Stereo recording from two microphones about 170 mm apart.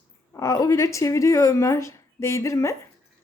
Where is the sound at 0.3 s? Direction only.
20° left (ahead or behind).